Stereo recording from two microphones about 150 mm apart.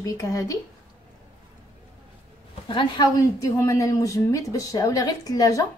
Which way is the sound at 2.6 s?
30° left (ahead or behind).